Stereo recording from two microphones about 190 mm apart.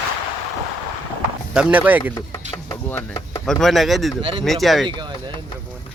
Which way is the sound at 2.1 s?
20° left (ahead or behind).